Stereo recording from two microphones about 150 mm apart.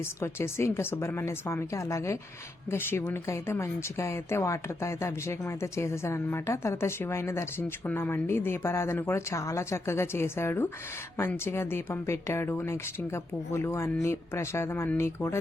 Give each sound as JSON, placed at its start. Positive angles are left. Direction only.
{"t": 0.2, "sound": "speech", "side_deg": 15}